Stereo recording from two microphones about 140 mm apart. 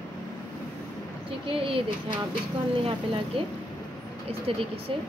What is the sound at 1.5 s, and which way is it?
Speech, 40° right (ahead or behind).